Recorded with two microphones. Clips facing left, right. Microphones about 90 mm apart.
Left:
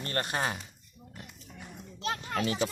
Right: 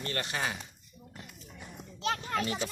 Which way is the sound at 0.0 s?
40° left (ahead or behind).